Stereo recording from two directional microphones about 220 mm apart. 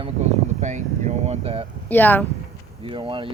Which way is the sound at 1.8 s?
10° left (ahead or behind).